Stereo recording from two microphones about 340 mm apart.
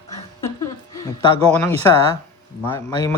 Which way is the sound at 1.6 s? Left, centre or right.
Centre.